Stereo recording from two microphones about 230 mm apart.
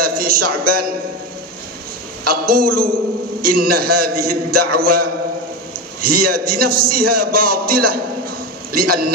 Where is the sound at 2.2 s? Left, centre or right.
Right.